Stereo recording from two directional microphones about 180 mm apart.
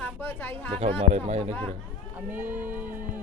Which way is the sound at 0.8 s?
40° right (ahead or behind).